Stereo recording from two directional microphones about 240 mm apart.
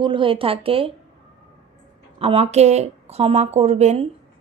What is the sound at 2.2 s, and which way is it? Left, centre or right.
Speech, right.